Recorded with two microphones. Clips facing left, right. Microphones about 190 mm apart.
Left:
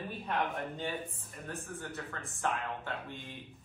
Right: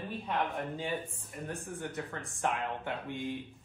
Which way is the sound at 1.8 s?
15° right (ahead or behind).